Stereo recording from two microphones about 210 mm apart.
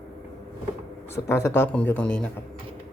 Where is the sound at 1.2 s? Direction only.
10° left (ahead or behind).